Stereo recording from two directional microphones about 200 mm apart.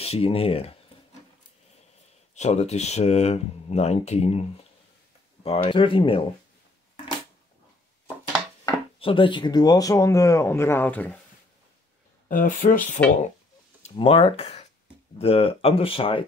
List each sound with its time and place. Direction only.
0.0 s speech: 30° left (ahead or behind)
2.3 s speech: 35° left (ahead or behind)
8.6 s speech: 25° left (ahead or behind); by 11.1 s 10° left (ahead or behind)
12.3 s speech: 45° left (ahead or behind)
13.8 s speech: 30° left (ahead or behind)